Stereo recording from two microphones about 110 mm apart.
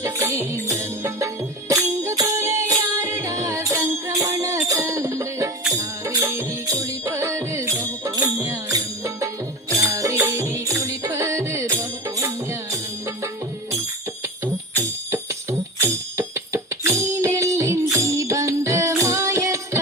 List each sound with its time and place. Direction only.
0.0 s music: 25° right (ahead or behind)